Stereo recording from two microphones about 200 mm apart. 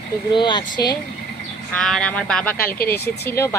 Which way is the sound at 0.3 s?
25° left (ahead or behind).